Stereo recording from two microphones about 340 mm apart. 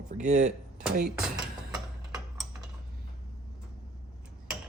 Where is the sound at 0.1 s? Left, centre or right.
Right.